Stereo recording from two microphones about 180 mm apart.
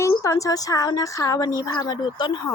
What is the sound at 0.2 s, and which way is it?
Speech, 20° left (ahead or behind).